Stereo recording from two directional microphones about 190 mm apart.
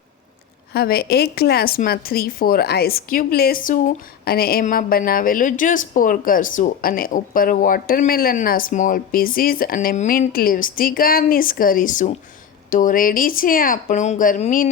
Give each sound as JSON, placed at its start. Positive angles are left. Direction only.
{"t": 0.7, "sound": "a woman's voice", "side_deg": 55}